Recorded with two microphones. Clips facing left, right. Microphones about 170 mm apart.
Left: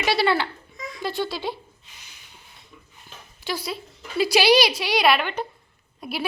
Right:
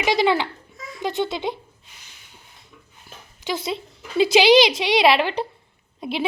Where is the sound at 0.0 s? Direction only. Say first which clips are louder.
Right 2 dB; 15° right (ahead or behind).